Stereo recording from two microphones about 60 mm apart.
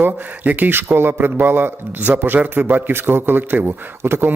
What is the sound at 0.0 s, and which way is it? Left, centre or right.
Speech, right.